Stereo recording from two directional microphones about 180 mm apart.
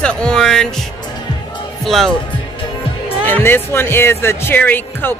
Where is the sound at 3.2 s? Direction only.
10° left (ahead or behind).